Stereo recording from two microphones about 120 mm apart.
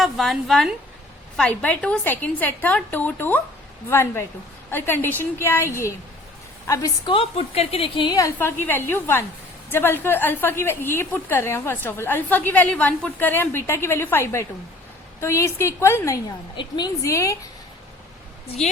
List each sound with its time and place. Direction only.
0.0 s a woman's voice: centre (ahead or behind); by 6.9 s 25° left (ahead or behind)
7.0 s a woman's voice: 50° left (ahead or behind)
8.6 s a woman's voice: 15° left (ahead or behind)
16.6 s a woman's voice: 35° left (ahead or behind)